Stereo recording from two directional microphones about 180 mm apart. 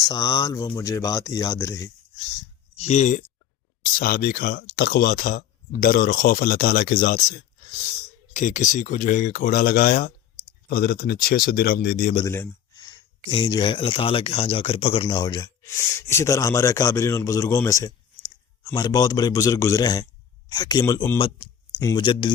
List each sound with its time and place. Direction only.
0.0 s speech: 20° left (ahead or behind)
2.7 s speech: 35° left (ahead or behind)
3.8 s speech: 55° left (ahead or behind)
12.3 s a sound: 15° left (ahead or behind)
13.3 s speech: 25° left (ahead or behind)